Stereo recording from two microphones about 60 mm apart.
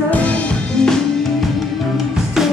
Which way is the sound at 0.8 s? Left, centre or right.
Centre.